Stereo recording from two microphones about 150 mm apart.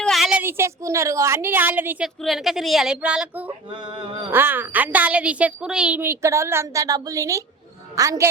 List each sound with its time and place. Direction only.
0.0 s a woman's voice: centre (ahead or behind)
2.2 s a woman's voice: centre (ahead or behind)
3.8 s mantra: 35° right (ahead or behind)
4.3 s a woman's voice: 15° right (ahead or behind)